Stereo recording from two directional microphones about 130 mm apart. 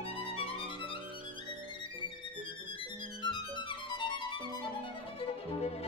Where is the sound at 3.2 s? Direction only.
35° left (ahead or behind).